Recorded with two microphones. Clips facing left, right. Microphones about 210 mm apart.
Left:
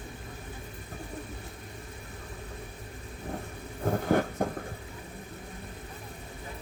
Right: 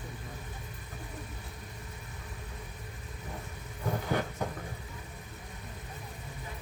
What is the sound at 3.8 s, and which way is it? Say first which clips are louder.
Vehicle: left 6 dB; 50° left (ahead or behind).